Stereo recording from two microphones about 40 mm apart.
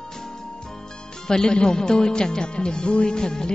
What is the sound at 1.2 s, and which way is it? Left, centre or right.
A woman's voice, centre.